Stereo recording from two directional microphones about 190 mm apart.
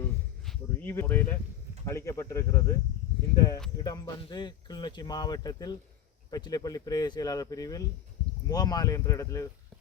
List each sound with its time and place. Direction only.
0.0 s a sound: 10° left (ahead or behind)
1.8 s speech: 15° left (ahead or behind)
3.8 s speech: 20° left (ahead or behind)